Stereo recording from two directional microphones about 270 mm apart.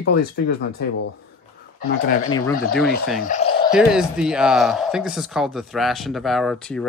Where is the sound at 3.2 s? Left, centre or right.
Left.